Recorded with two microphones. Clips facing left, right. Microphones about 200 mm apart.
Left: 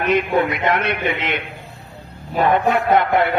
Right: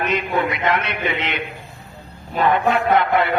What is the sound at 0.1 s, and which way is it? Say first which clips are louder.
A man's voice: left 4 dB; 55° left (ahead or behind).